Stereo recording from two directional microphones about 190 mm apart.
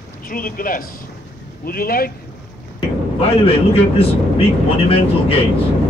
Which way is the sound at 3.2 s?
30° left (ahead or behind).